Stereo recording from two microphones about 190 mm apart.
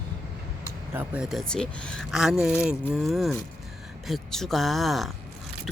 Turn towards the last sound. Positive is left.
turn(degrees=0)  # may be behind; listen again after turning